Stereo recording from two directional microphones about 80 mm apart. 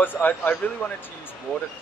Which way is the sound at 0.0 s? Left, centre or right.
Left.